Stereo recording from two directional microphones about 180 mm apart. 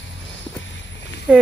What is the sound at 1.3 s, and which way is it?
Speech, 5° right (ahead or behind).